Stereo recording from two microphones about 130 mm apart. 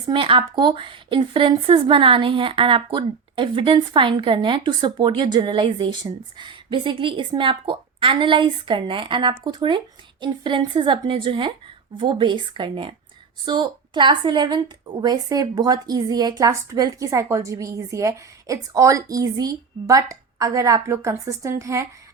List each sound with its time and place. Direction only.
0.1 s a woman's voice: 40° right (ahead or behind); by 21.8 s 25° right (ahead or behind)